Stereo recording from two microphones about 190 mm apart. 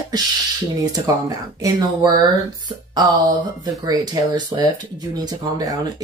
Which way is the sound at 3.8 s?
20° right (ahead or behind).